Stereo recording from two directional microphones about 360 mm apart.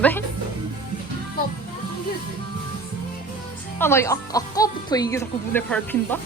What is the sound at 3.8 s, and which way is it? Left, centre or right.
Speech, centre.